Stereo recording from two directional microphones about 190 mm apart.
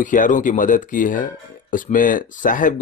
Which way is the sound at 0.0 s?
45° left (ahead or behind).